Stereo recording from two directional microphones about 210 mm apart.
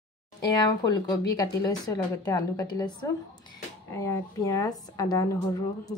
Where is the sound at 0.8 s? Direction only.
20° left (ahead or behind).